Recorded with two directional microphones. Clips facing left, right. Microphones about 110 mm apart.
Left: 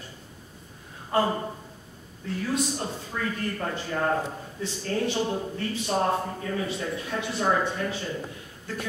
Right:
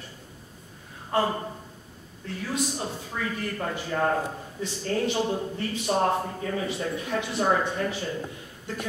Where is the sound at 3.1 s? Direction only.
10° right (ahead or behind).